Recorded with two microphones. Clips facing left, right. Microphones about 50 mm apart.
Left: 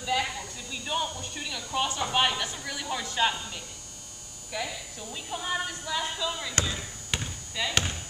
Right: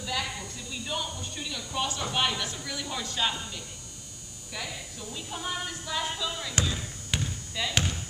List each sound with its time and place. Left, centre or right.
0.0 s a sound: left
1.3 s a woman's voice: centre
4.5 s hum: centre
5.3 s a woman's voice: centre
5.7 s speech: centre
7.2 s basketball bounce: centre